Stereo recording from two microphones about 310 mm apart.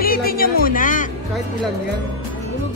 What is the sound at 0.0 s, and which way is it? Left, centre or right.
Music, left.